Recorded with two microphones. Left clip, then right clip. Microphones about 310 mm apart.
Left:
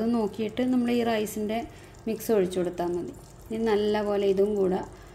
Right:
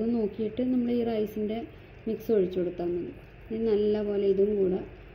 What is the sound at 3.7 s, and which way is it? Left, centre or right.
Speech, centre.